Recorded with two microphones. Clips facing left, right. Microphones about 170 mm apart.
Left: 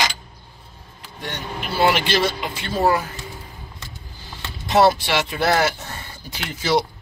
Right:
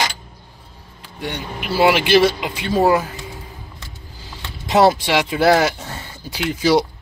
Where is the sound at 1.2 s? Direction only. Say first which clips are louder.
Right 3 dB; 10° right (ahead or behind).